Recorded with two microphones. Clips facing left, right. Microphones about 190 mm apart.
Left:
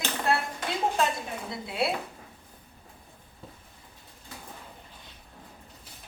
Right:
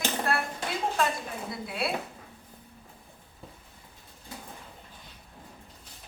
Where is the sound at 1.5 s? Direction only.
25° left (ahead or behind).